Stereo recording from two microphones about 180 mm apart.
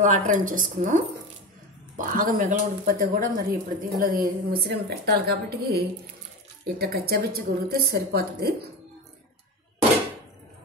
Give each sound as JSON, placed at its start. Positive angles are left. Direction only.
{"t": 0.0, "sound": "a woman's voice", "side_deg": -45}